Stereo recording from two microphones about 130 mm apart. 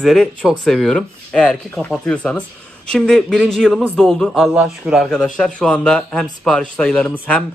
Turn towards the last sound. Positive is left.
turn(degrees=10)  # may be behind; listen again after turning